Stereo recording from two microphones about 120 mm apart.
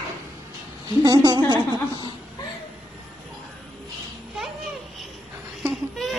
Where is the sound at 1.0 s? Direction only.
35° right (ahead or behind).